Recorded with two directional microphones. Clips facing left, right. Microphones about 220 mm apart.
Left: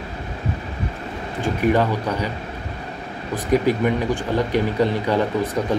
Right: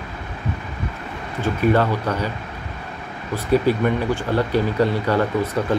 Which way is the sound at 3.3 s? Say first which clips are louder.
Right 1 dB; 15° left (ahead or behind).